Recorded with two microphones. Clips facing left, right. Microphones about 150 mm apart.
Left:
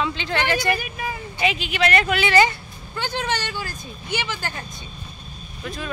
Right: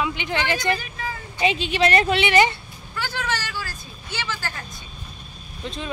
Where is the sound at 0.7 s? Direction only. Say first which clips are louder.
Left 1 dB; 15° left (ahead or behind).